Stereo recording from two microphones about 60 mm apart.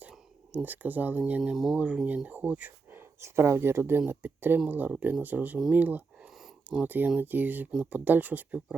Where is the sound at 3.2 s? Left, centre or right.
Right.